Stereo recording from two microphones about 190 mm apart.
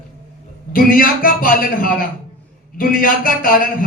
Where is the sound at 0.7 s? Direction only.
50° left (ahead or behind).